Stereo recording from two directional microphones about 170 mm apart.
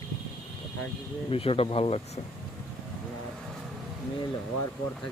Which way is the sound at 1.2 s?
35° left (ahead or behind).